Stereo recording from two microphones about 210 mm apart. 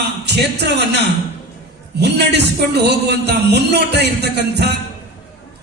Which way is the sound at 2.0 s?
50° right (ahead or behind).